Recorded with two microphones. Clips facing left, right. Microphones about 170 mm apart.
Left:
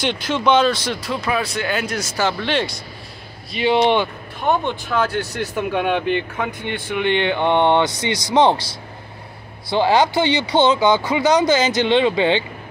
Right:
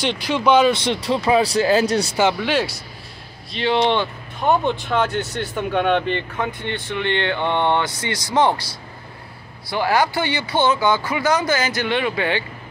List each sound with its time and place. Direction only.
0.3 s speech: 10° right (ahead or behind)
0.8 s speech: 25° right (ahead or behind)
2.3 s speech: 5° right (ahead or behind)
3.5 s speech: 15° left (ahead or behind)
4.5 s speech: centre (ahead or behind); by 8.6 s 20° left (ahead or behind)
9.7 s speech: 25° left (ahead or behind)